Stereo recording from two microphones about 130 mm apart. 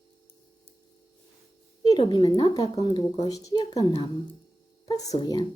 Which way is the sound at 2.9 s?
40° left (ahead or behind).